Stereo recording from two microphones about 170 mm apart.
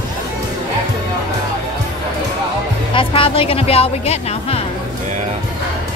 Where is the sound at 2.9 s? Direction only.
30° left (ahead or behind).